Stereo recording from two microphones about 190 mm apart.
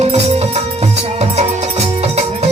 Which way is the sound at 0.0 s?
35° right (ahead or behind).